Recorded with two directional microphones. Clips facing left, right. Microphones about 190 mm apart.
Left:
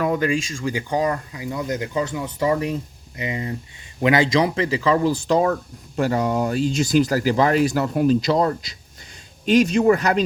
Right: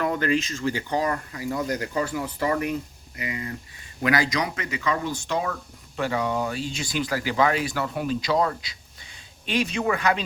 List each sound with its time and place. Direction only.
0.0 s speech: 10° left (ahead or behind); by 10.2 s 40° left (ahead or behind)